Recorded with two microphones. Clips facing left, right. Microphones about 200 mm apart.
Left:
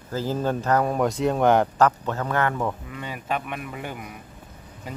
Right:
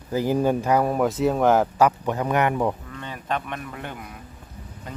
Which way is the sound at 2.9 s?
10° left (ahead or behind).